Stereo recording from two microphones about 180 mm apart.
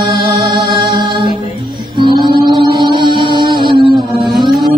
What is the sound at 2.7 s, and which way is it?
Music, 25° right (ahead or behind).